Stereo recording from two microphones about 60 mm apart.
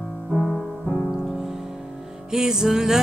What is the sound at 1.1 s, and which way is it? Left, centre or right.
Music, centre.